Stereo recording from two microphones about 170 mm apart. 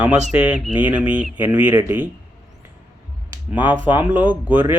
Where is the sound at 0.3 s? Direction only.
10° right (ahead or behind).